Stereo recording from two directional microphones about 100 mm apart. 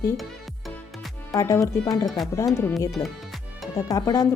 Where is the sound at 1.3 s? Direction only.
35° left (ahead or behind).